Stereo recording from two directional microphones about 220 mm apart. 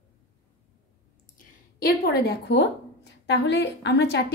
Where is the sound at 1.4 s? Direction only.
40° left (ahead or behind).